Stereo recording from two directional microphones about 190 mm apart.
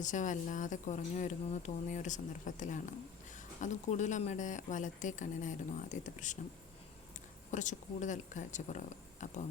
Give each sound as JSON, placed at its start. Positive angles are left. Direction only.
{"t": 0.0, "sound": "speech", "side_deg": 40}
{"t": 7.5, "sound": "speech", "side_deg": 40}